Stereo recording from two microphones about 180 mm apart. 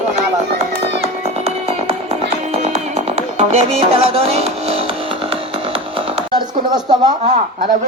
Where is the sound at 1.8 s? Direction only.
35° right (ahead or behind).